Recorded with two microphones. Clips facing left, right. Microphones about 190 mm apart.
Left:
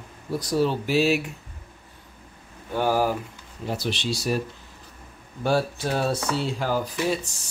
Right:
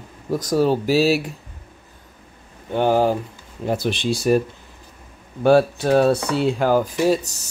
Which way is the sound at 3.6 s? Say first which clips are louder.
Right 6 dB; 50° right (ahead or behind).